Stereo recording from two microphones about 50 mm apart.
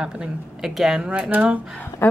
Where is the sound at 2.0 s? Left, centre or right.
Left.